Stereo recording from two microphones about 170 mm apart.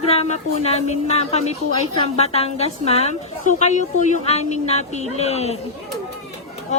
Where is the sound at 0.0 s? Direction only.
35° left (ahead or behind).